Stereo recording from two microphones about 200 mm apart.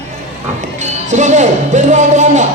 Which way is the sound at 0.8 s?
35° right (ahead or behind).